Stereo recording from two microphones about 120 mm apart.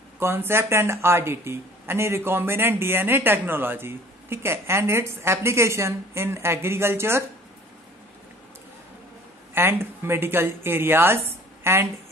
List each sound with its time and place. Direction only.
0.2 s speech: 20° right (ahead or behind)
9.5 s speech: 20° right (ahead or behind)